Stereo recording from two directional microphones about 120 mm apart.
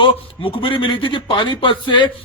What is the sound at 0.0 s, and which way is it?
A man's voice, 45° left (ahead or behind).